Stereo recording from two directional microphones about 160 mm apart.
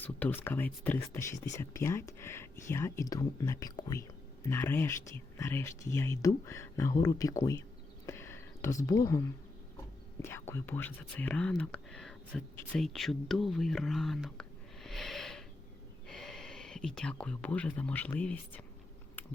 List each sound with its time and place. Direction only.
0.0 s speech: 10° left (ahead or behind)
8.0 s a sound: 15° left (ahead or behind)
10.2 s speech: 15° left (ahead or behind)